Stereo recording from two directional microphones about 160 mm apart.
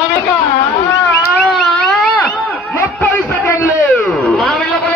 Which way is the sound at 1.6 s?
10° left (ahead or behind).